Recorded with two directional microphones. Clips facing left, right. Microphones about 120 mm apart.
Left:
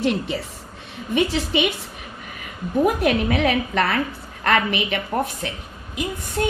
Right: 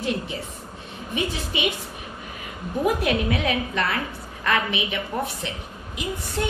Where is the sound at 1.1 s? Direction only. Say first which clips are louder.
Left 7 dB; 65° left (ahead or behind).